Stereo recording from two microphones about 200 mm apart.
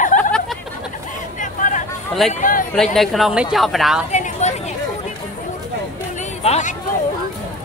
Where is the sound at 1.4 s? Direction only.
40° left (ahead or behind).